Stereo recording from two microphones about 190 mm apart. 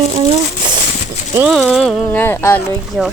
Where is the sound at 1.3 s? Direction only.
5° right (ahead or behind); by 2.6 s 10° left (ahead or behind).